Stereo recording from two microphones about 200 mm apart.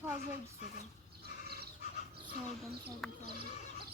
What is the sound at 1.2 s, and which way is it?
Crow, 50° right (ahead or behind).